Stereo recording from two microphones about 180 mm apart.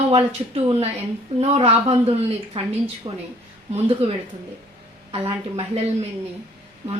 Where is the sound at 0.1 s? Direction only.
35° right (ahead or behind).